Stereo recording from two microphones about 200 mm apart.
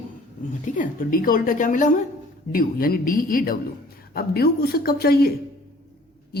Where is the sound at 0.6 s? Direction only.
40° left (ahead or behind).